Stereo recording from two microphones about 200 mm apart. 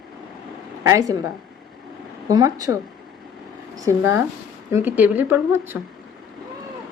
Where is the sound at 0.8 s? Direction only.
15° right (ahead or behind).